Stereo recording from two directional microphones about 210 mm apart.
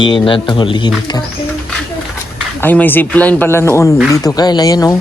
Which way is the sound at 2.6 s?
10° left (ahead or behind).